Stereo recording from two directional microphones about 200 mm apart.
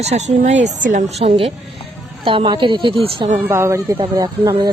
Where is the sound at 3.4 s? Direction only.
15° right (ahead or behind).